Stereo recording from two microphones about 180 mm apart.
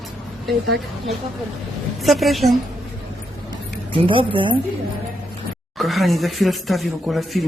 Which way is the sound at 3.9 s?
30° right (ahead or behind).